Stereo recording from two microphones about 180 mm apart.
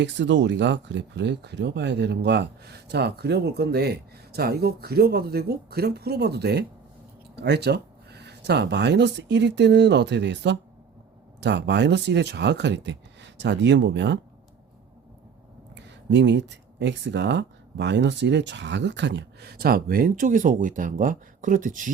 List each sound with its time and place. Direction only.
0.0 s speech: 80° right
15.7 s speech: 80° right; by 21.9 s 45° right (ahead or behind)